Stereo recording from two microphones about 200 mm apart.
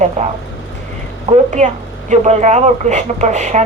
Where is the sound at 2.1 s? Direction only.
35° right (ahead or behind).